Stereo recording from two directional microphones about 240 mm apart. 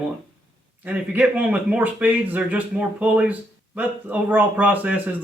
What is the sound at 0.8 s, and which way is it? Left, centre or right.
A man's voice, centre.